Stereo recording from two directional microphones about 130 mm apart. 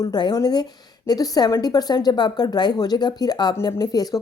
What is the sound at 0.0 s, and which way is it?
A woman's voice, 30° left (ahead or behind).